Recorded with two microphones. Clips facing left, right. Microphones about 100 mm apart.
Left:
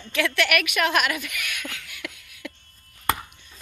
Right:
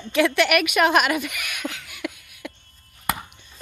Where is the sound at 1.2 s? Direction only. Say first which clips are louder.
Right 4 dB; 15° right (ahead or behind).